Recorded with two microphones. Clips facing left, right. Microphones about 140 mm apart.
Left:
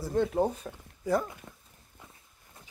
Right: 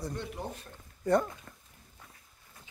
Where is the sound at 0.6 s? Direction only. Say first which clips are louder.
Left 9 dB; 90° left.